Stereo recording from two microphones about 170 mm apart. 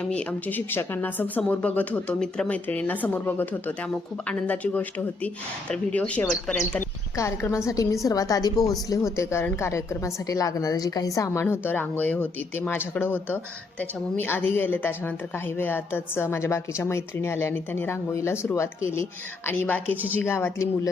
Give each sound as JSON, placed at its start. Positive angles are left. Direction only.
{"t": 0.0, "sound": "a woman's voice", "side_deg": 5}